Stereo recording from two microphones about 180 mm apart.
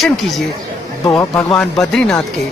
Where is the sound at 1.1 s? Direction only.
15° left (ahead or behind).